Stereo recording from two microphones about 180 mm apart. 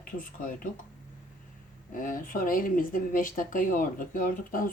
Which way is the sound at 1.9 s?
50° left (ahead or behind).